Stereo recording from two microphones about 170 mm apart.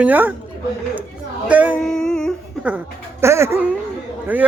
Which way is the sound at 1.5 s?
10° right (ahead or behind).